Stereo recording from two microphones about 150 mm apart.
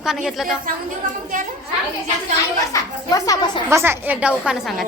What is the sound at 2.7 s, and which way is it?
Speech, 25° left (ahead or behind).